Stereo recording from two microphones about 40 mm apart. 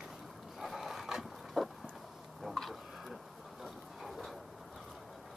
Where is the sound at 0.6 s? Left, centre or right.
Centre.